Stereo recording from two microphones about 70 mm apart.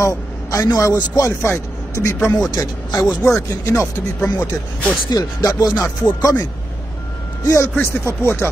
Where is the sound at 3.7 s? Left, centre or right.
Left.